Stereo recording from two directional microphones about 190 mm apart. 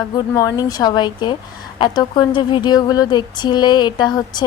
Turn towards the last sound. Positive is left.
turn(degrees=20)  # may be behind; listen again after turning